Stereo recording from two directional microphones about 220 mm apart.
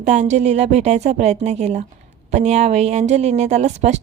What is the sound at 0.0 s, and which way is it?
A woman's voice, 35° right (ahead or behind).